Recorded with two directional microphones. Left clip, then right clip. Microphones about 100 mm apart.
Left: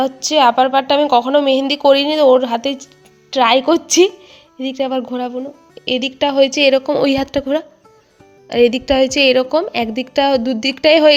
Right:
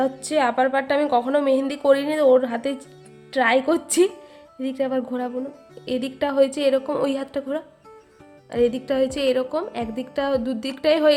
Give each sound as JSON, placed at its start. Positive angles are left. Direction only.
{"t": 0.0, "sound": "a woman's voice", "side_deg": 25}
{"t": 6.6, "sound": "a woman's voice", "side_deg": 55}